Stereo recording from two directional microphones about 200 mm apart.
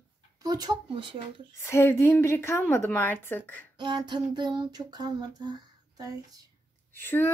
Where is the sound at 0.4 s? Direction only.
20° right (ahead or behind).